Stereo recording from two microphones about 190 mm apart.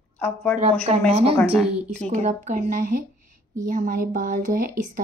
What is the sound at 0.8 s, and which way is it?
A woman's voice, 30° right (ahead or behind).